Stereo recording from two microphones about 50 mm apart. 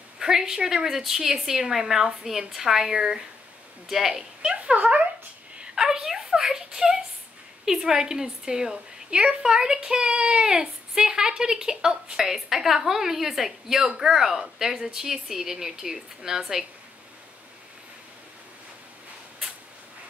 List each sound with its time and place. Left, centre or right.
0.2 s a woman's voice: centre
4.4 s speech: right
5.6 s a sound: centre
7.6 s a woman's voice: centre